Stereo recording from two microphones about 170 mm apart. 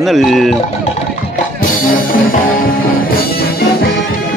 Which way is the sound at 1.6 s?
55° left (ahead or behind).